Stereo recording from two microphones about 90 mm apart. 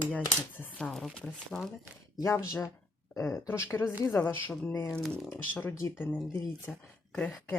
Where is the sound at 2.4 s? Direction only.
35° left (ahead or behind).